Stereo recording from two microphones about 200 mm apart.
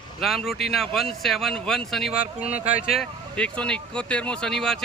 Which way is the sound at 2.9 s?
5° left (ahead or behind).